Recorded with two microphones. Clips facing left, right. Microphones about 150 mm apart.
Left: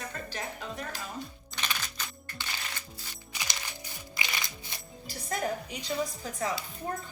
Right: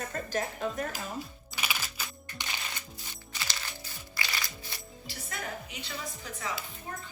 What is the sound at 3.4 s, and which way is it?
Music, 15° left (ahead or behind).